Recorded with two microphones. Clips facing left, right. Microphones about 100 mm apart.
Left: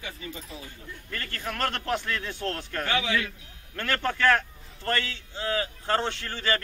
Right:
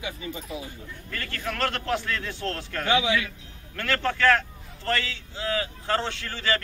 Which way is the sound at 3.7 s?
20° left (ahead or behind).